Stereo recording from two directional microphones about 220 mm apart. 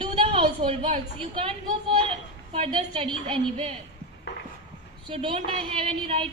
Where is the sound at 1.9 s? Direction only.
25° right (ahead or behind).